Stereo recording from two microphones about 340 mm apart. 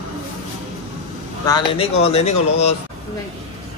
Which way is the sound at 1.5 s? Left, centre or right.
Centre.